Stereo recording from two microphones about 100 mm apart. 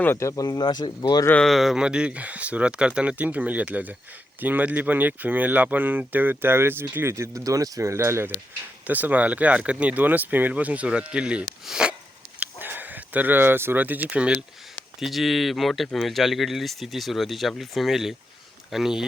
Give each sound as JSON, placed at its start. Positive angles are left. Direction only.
{"t": 0.0, "sound": "speech", "side_deg": 25}
{"t": 1.5, "sound": "speech", "side_deg": 0}
{"t": 8.9, "sound": "speech", "side_deg": -15}
{"t": 12.4, "sound": "speech", "side_deg": -20}